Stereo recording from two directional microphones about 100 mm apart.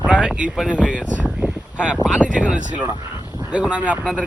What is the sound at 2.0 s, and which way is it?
Speech, 5° right (ahead or behind).